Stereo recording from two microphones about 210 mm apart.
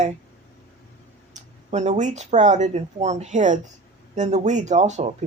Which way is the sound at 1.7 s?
35° right (ahead or behind).